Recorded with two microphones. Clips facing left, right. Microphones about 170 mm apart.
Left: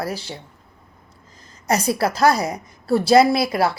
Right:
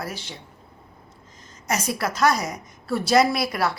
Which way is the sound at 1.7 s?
35° left (ahead or behind).